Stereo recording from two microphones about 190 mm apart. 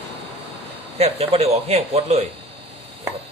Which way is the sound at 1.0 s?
30° right (ahead or behind).